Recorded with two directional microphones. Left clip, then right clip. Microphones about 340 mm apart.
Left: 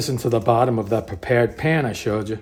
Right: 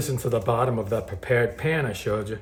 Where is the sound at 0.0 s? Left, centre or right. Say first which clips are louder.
Left 5 dB; left.